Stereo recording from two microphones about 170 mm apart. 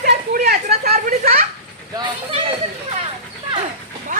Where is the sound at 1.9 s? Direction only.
30° right (ahead or behind).